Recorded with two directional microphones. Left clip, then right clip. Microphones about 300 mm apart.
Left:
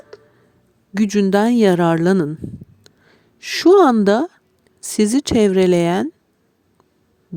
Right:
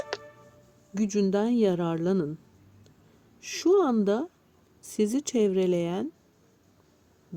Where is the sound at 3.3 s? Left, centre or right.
Left.